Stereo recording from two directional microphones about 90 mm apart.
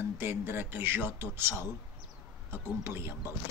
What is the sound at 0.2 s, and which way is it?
Speech, 25° right (ahead or behind).